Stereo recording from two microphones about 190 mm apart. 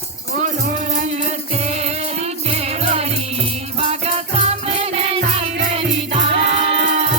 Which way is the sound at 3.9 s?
30° right (ahead or behind).